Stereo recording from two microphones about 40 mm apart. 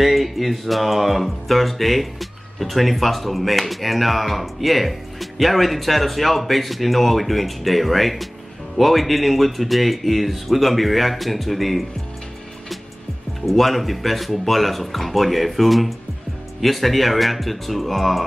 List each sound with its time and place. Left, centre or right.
0.0 s speech: centre
13.5 s speech: centre